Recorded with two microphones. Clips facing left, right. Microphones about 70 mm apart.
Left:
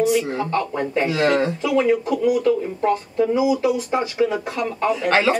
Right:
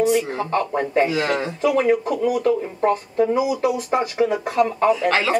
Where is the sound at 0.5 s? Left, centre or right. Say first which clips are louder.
Right 1 dB; centre.